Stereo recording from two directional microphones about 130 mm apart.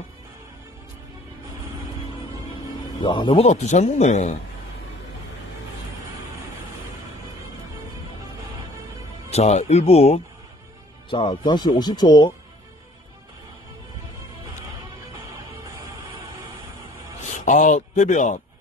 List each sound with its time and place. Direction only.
3.0 s speech: 40° left (ahead or behind)
3.4 s speech: 65° left (ahead or behind)
9.3 s speech: 55° left (ahead or behind)
11.1 s speech: 35° left (ahead or behind)
17.5 s speech: 70° left (ahead or behind)